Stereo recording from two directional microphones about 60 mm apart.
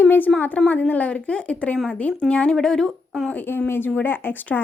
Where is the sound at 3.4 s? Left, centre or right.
Left.